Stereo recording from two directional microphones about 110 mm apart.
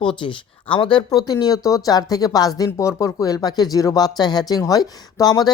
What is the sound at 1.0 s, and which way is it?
Speech, 35° left (ahead or behind).